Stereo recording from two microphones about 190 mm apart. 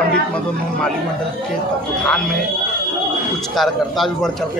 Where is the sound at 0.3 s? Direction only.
5° left (ahead or behind).